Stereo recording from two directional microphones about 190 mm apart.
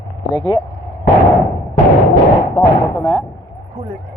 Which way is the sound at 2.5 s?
15° left (ahead or behind).